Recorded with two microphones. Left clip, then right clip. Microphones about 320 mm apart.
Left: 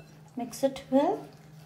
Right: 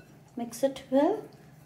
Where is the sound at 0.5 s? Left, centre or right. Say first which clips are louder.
Even; centre.